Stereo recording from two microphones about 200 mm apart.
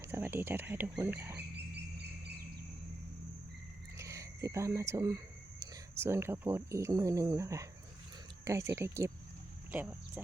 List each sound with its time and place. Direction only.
0.0 s speech: 10° right (ahead or behind)
1.5 s a sound: 55° right (ahead or behind)
3.9 s speech: 15° right (ahead or behind)